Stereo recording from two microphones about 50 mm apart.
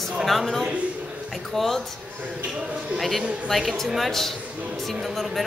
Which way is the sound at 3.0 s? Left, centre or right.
Centre.